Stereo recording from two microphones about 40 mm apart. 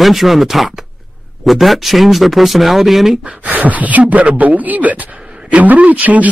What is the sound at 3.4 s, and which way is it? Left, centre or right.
Speech, right.